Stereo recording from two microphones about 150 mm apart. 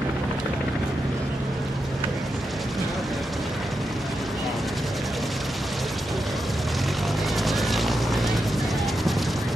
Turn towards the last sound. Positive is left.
turn(degrees=0)  # may be behind; listen again after turning